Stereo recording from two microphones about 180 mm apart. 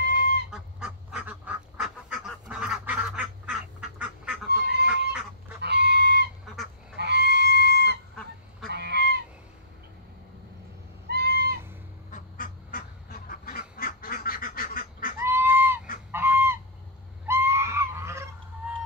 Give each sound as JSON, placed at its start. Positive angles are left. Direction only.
{"t": 0.0, "sound": "goose", "side_deg": -70}
{"t": 0.5, "sound": "goose", "side_deg": -5}
{"t": 4.6, "sound": "fowl", "side_deg": -70}
{"t": 5.6, "sound": "chicken", "side_deg": -70}
{"t": 8.6, "sound": "goose", "side_deg": -65}
{"t": 11.1, "sound": "owl", "side_deg": -65}
{"t": 12.1, "sound": "goose", "side_deg": 50}
{"t": 15.1, "sound": "goose", "side_deg": -15}